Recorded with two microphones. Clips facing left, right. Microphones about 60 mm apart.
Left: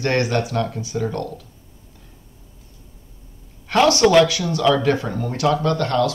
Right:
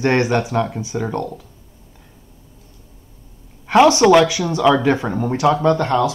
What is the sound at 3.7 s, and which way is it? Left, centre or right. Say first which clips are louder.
Speech: right 4 dB; right.